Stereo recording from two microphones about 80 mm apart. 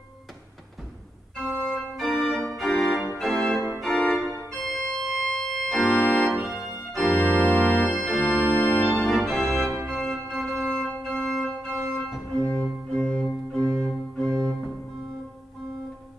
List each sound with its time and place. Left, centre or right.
1.6 s organ: centre
6.6 s organ: left
6.9 s organ: centre
7.2 s organ: centre
7.9 s organ: centre